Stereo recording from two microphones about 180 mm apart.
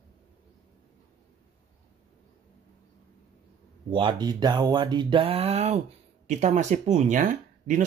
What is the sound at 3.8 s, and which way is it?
Speech, 25° right (ahead or behind).